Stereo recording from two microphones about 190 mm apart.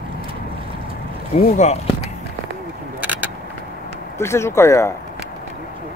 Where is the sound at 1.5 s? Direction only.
35° left (ahead or behind).